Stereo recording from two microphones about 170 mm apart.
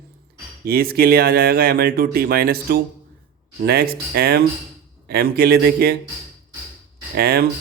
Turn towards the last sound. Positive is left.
turn(degrees=-65)  # may be behind; listen again after turning